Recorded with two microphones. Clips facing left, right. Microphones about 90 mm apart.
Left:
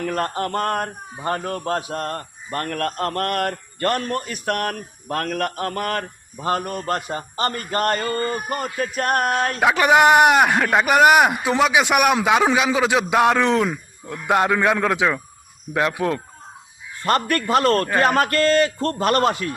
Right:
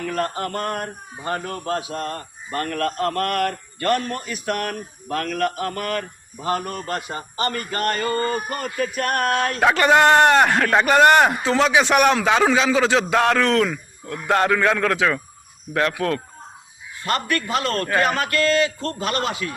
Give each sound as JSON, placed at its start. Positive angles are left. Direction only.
{"t": 0.0, "sound": "a man's voice", "side_deg": 40}
{"t": 8.0, "sound": "a sound", "side_deg": -30}
{"t": 9.0, "sound": "a man's voice", "side_deg": 35}
{"t": 9.6, "sound": "a man's voice", "side_deg": 10}
{"t": 17.0, "sound": "a man's voice", "side_deg": 45}